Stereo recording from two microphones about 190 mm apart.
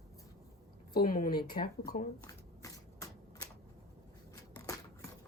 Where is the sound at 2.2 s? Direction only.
15° left (ahead or behind).